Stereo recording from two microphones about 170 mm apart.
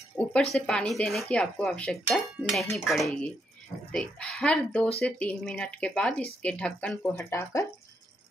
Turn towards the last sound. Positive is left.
turn(degrees=15)  # may be behind; listen again after turning